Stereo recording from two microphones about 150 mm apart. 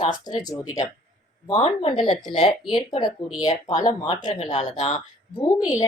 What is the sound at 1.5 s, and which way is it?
A woman's voice, 40° left (ahead or behind).